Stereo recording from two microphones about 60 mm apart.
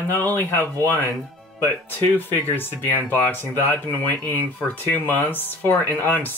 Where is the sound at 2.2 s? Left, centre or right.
Left.